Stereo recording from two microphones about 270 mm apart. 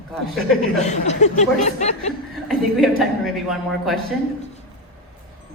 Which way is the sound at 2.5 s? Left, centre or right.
Centre.